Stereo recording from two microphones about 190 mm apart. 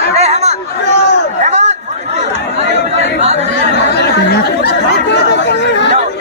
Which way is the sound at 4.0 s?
60° left (ahead or behind).